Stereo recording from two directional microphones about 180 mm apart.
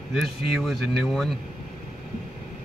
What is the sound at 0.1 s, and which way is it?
Speech, 5° right (ahead or behind).